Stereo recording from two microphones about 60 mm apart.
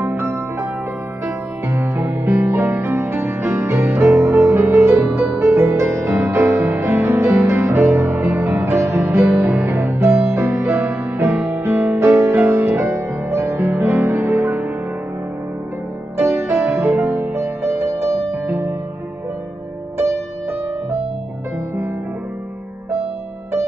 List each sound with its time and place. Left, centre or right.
0.2 s music: right
1.7 s music: right
8.8 s music: right
13.6 s music: right
16.2 s music: right
16.4 s music: right